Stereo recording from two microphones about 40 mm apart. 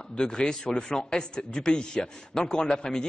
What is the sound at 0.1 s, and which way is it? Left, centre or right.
A man's voice, centre.